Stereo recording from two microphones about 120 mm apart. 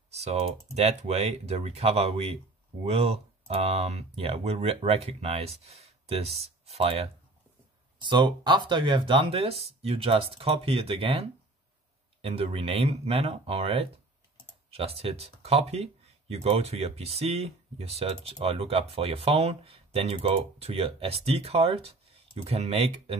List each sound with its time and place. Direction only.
0.1 s speech: 65° right (ahead or behind)
8.0 s speech: 40° right (ahead or behind); by 23.1 s 55° right (ahead or behind)